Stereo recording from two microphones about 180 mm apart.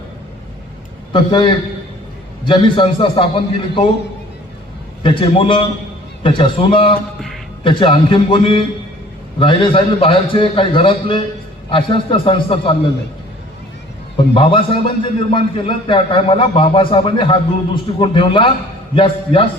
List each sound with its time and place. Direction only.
1.1 s a man's voice: 25° left (ahead or behind)
5.0 s a man's voice: 30° left (ahead or behind)
14.3 s a man's voice: 30° left (ahead or behind)